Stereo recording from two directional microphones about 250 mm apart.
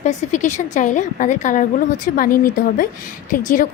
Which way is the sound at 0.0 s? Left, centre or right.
Left.